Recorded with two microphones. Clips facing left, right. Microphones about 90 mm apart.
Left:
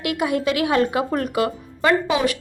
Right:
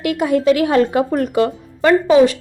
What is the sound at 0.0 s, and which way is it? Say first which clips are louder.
A woman's voice: right 6 dB; 30° right (ahead or behind).